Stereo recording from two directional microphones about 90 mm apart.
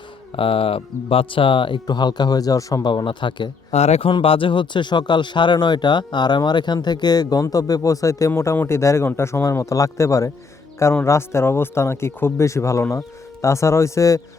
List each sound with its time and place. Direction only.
0.3 s speech: 90° left; by 2.8 s 40° left (ahead or behind)
2.8 s speech: 65° left (ahead or behind)
4.0 s speech: 90° left; by 14.2 s 35° left (ahead or behind)